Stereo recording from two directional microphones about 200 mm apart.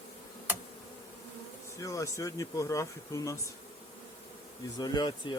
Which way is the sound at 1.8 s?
15° left (ahead or behind).